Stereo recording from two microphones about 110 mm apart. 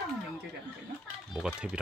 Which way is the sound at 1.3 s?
5° right (ahead or behind).